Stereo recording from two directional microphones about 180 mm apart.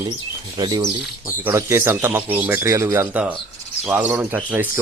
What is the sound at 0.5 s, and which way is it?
Speech, 20° right (ahead or behind).